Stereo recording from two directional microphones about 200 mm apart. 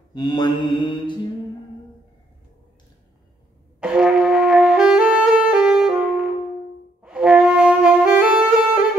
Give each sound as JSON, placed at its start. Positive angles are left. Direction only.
{"t": 0.1, "sound": "mantra", "side_deg": 20}
{"t": 3.8, "sound": "brass instrument", "side_deg": -5}
{"t": 7.0, "sound": "wind instrument", "side_deg": -5}